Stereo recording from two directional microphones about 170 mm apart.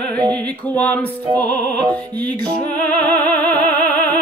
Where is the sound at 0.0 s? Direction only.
5° left (ahead or behind).